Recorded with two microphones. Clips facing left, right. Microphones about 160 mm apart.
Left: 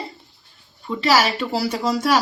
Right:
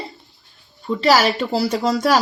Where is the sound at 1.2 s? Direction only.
45° right (ahead or behind).